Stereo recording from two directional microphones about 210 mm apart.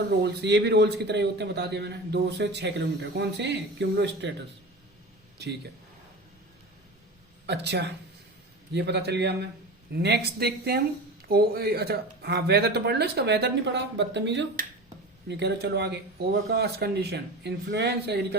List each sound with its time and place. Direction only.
0.2 s a man's voice: 50° right (ahead or behind)
7.4 s a man's voice: 55° right (ahead or behind)